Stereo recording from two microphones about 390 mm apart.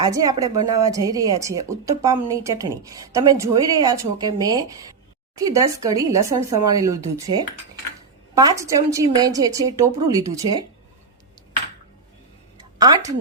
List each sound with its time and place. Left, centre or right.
0.0 s speech: centre
12.8 s a woman's voice: centre